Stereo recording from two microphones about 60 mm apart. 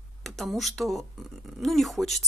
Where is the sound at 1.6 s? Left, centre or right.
Centre.